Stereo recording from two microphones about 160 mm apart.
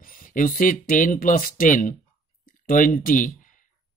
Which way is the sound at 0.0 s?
60° left (ahead or behind).